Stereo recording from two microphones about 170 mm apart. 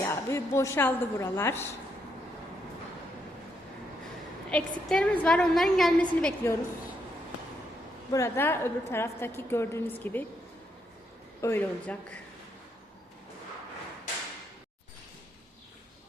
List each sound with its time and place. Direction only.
0.0 s a woman's voice: 15° left (ahead or behind)
4.9 s a woman's voice: 5° left (ahead or behind)
8.1 s a woman's voice: 15° left (ahead or behind)
11.3 s a woman's voice: 15° left (ahead or behind)